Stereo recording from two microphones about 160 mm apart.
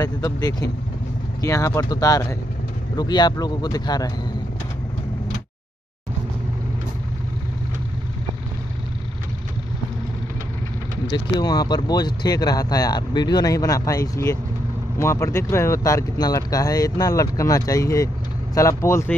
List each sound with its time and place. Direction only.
0.0 s speech: 25° left (ahead or behind)
11.1 s speech: 25° left (ahead or behind)